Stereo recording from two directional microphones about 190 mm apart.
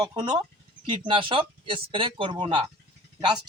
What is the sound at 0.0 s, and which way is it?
A man's voice, 20° right (ahead or behind).